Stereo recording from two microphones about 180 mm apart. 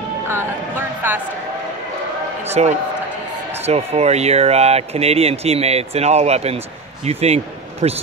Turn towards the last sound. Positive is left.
turn(degrees=-35)  # may be behind; listen again after turning